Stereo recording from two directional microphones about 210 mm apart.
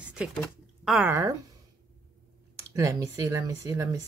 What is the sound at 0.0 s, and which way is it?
Speech, 5° right (ahead or behind).